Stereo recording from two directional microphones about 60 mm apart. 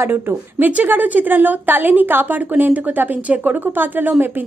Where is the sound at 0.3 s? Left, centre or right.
Right.